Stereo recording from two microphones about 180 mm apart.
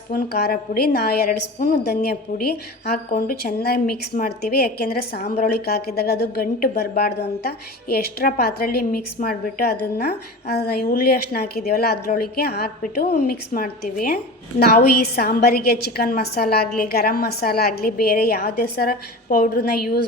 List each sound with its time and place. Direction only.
0.1 s a woman's voice: 60° left (ahead or behind)